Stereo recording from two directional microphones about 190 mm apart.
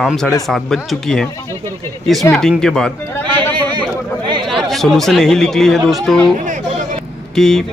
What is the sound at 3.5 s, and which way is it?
Chatter, 25° right (ahead or behind).